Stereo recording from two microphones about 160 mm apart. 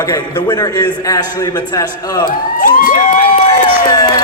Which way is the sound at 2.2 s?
60° left (ahead or behind).